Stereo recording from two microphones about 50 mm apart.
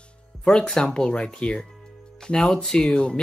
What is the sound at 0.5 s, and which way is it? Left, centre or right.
Speech, centre.